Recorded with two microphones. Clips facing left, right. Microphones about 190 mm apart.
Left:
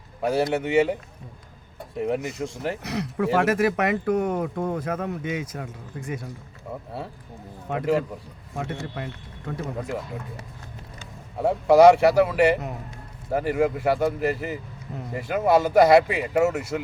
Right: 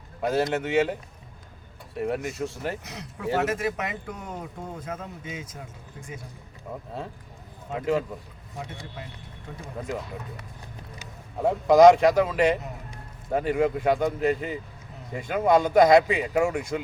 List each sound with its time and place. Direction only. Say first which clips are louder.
0.2 s speech: left 2 dB; 10° left (ahead or behind)
2.0 s speech: left 2 dB; 15° left (ahead or behind)
2.8 s speech: left 7 dB; 70° left (ahead or behind)
7.7 s speech: left 2 dB; 65° left (ahead or behind)
11.4 s speech: left 1 dB; 10° left (ahead or behind)